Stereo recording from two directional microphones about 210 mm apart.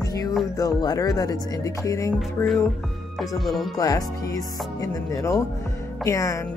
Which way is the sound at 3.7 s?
15° left (ahead or behind).